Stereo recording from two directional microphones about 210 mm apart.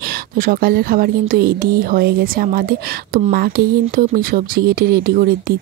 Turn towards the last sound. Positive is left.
turn(degrees=-45)  # may be behind; listen again after turning